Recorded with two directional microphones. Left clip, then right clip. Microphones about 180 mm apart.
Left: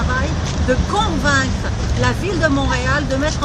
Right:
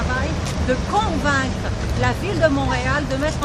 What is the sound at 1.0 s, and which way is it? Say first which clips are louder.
Vehicle: left 2 dB; 35° left (ahead or behind).